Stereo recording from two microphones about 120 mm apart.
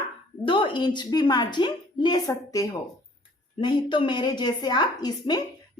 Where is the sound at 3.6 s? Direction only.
40° left (ahead or behind).